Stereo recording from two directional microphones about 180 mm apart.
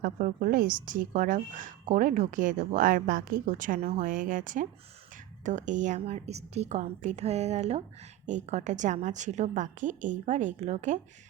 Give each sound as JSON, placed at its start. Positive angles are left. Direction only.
{"t": 0.0, "sound": "a woman's voice", "side_deg": -50}